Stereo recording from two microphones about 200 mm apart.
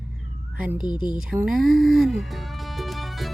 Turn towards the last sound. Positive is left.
turn(degrees=0)  # may be behind; listen again after turning